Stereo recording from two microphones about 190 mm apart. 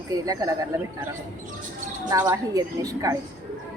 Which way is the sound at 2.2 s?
15° right (ahead or behind).